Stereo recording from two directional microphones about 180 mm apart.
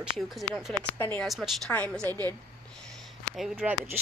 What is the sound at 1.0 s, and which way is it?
Speech, 10° left (ahead or behind).